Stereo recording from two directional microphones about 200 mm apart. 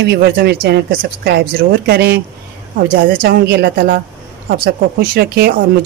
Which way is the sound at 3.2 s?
50° right (ahead or behind).